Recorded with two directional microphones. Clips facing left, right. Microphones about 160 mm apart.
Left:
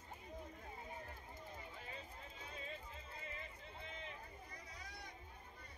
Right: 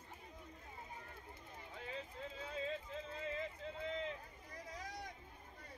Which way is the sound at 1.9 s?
90° right.